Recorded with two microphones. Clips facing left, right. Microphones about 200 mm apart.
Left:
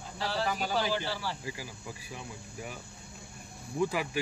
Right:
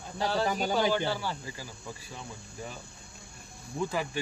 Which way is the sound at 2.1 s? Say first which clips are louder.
Left 1 dB; 10° left (ahead or behind).